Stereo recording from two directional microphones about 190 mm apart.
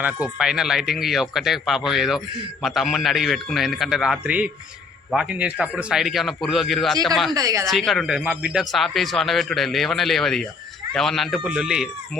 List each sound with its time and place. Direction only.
0.0 s speech: 5° right (ahead or behind)
7.3 s a woman's voice: 20° right (ahead or behind)
7.7 s speech: centre (ahead or behind)